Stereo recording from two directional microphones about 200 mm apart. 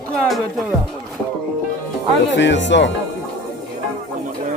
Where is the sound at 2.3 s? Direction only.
60° left (ahead or behind).